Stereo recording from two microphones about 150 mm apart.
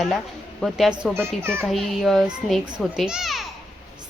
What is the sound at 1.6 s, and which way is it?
Speech, centre (ahead or behind).